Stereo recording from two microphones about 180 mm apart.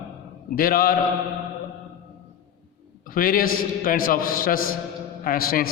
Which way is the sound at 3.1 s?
50° left (ahead or behind).